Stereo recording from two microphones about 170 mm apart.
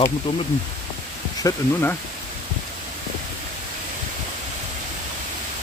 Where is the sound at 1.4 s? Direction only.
15° left (ahead or behind).